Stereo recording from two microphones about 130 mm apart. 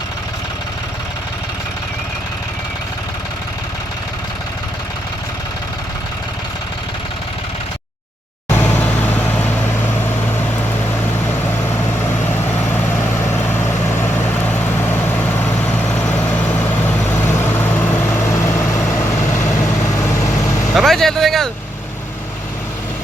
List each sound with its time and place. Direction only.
8.4 s vehicle: 15° left (ahead or behind)
16.5 s vehicle: 20° left (ahead or behind)
20.7 s vehicle: centre (ahead or behind)